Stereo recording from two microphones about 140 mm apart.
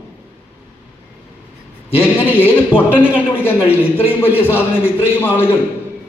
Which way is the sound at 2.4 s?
15° left (ahead or behind).